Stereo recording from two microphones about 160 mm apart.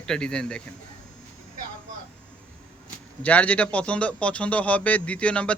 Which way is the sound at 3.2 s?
10° left (ahead or behind).